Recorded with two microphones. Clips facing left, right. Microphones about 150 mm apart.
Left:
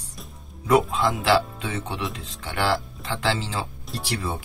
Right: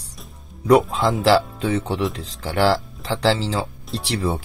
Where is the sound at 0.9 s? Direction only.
35° right (ahead or behind).